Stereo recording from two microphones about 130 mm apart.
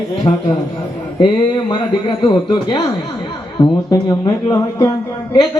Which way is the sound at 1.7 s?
35° left (ahead or behind).